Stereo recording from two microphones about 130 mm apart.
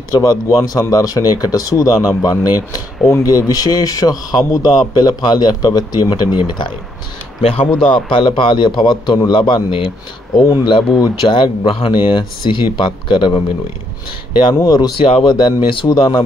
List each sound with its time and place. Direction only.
0.1 s speech: 25° left (ahead or behind)
7.9 s speech: 40° left (ahead or behind)
14.5 s speech: 30° left (ahead or behind)
15.0 s speech: 45° left (ahead or behind)